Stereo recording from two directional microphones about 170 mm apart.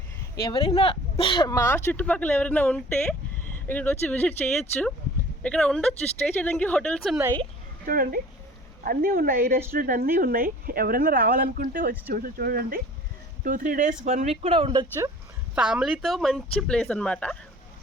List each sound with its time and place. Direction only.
0.4 s speech: 30° left (ahead or behind); by 4.4 s 10° left (ahead or behind)
5.4 s speech: 5° left (ahead or behind)
7.9 s speech: 55° right (ahead or behind); by 14.8 s 30° right (ahead or behind)
15.5 s speech: 5° right (ahead or behind)